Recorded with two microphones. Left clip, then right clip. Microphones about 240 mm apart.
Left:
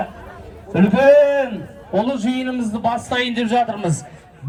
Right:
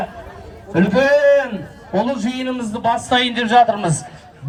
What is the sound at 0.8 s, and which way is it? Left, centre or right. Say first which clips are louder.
A man's voice: left 2 dB; right.